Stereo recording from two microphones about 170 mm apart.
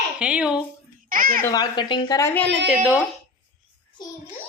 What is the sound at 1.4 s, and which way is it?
A woman's voice, 20° left (ahead or behind).